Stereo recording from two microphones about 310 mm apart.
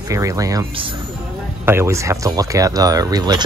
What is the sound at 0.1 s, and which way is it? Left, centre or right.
Speech, centre.